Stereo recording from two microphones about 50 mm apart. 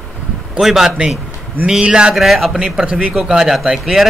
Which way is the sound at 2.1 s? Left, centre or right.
Centre.